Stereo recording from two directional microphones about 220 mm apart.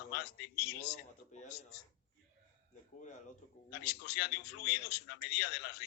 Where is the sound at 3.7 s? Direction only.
45° left (ahead or behind).